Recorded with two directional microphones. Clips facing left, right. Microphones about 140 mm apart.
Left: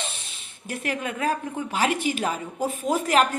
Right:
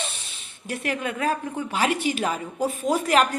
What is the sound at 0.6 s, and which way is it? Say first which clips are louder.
Speech: right 1 dB; 40° right (ahead or behind).